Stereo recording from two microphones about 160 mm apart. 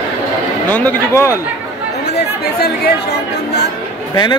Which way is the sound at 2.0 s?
85° left.